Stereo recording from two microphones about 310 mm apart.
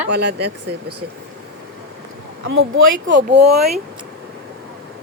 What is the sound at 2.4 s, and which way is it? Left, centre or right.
Speech, right.